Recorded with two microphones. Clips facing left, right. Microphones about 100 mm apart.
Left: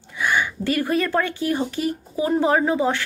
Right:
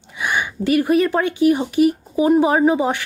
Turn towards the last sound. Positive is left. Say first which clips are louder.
# right 4 dB
turn(degrees=-15)  # may be behind; listen again after turning